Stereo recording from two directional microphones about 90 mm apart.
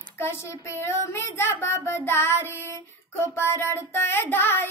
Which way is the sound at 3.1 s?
25° left (ahead or behind).